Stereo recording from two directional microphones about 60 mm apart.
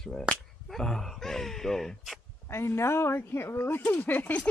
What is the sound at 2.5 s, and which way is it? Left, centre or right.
Speech, left.